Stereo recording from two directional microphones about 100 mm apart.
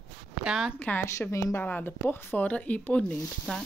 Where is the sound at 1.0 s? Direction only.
30° left (ahead or behind).